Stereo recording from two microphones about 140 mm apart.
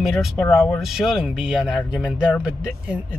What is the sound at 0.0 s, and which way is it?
Speech, centre (ahead or behind).